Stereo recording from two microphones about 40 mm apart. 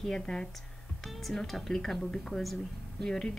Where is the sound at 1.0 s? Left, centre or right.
Centre.